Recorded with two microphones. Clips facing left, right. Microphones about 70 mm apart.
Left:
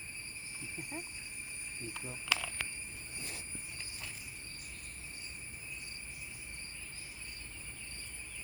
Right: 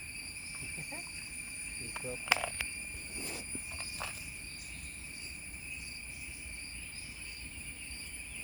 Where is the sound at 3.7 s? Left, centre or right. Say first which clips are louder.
Right 7 dB; right.